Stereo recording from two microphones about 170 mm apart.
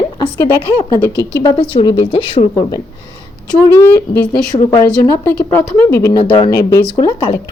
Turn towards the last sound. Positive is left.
turn(degrees=25)  # may be behind; listen again after turning